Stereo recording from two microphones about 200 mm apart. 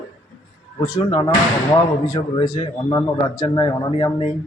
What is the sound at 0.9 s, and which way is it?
A man's voice, 20° left (ahead or behind).